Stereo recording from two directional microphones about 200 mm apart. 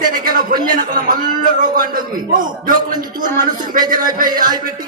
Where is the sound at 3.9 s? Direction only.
45° right (ahead or behind).